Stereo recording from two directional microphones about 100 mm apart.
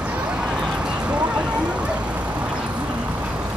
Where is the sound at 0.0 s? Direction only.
10° right (ahead or behind).